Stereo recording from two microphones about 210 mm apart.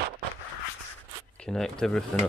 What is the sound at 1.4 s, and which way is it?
Speech, 5° left (ahead or behind).